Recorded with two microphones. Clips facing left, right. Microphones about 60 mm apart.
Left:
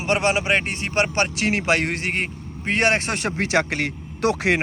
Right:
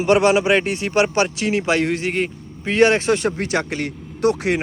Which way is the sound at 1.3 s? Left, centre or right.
Left.